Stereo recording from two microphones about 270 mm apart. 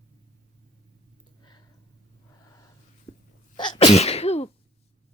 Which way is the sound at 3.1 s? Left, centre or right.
Centre.